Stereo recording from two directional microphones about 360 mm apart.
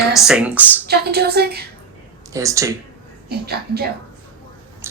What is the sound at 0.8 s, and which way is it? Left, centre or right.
Speech, right.